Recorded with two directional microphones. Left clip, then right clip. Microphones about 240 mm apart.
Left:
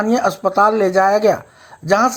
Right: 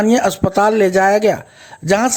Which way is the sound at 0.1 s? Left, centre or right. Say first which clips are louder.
Right 1 dB; right.